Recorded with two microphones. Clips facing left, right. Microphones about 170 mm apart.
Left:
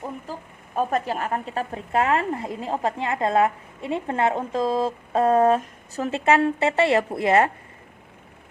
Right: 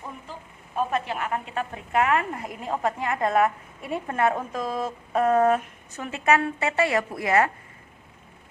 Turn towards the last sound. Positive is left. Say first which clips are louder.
# left 3 dB
turn(degrees=30)  # may be behind; listen again after turning